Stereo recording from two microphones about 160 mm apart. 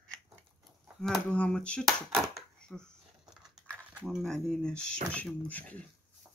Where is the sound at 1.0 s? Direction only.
5° left (ahead or behind).